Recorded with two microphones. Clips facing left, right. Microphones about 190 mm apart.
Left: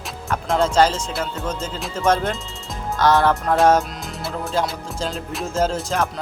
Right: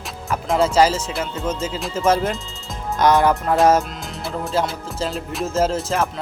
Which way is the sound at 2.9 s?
15° right (ahead or behind).